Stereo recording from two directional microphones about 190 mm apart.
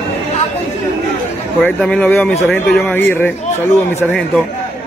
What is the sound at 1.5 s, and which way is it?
Speech, 5° left (ahead or behind).